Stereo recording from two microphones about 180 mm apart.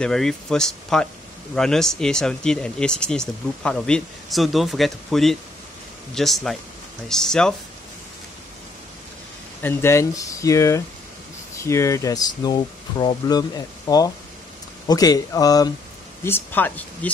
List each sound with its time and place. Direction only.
0.0 s speech: 5° left (ahead or behind)
9.6 s speech: 10° left (ahead or behind)